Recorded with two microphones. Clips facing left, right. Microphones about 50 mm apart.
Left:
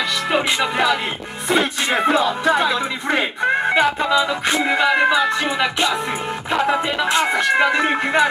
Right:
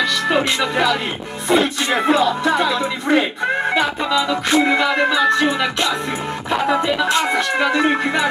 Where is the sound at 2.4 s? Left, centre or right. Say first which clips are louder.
Even; centre.